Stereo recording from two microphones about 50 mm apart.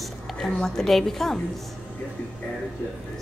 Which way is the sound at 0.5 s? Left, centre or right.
Centre.